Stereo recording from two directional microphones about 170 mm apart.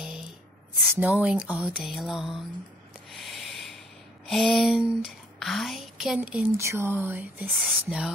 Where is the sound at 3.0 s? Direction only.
Centre (ahead or behind).